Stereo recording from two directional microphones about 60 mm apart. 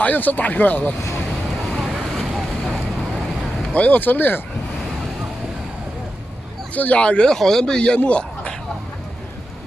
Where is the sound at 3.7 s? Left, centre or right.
Left.